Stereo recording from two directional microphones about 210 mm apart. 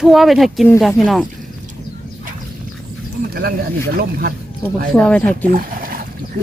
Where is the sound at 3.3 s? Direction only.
45° right (ahead or behind).